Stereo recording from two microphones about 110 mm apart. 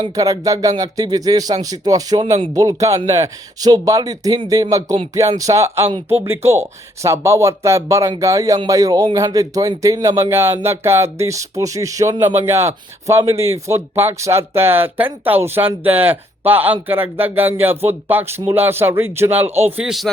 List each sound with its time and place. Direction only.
0.2 s a man's voice: 30° right (ahead or behind)
19.7 s speech: 5° right (ahead or behind)